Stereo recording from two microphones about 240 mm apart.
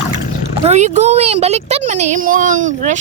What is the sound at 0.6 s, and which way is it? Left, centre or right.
Speech, right.